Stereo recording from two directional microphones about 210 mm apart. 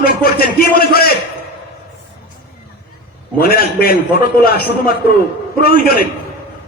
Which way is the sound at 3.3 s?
45° left (ahead or behind).